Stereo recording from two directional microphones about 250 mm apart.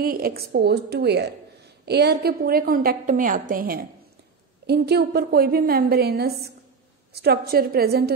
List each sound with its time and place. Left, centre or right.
0.0 s a woman's voice: right